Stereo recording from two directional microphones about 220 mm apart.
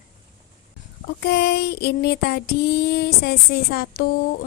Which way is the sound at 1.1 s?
50° left (ahead or behind).